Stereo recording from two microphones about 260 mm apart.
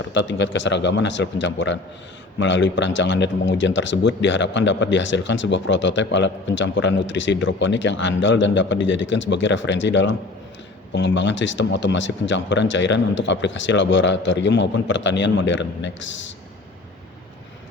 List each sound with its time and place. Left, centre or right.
0.0 s speech: left